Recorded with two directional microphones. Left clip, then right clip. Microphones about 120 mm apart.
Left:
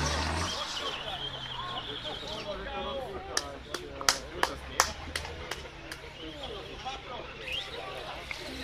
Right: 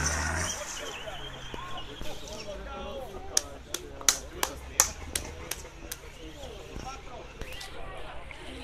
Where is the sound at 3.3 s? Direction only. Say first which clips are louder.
Right 4 dB; 90° right.